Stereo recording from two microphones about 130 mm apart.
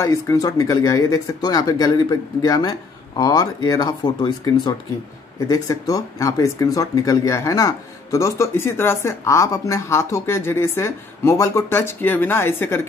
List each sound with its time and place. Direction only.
0.0 s speech: 25° left (ahead or behind)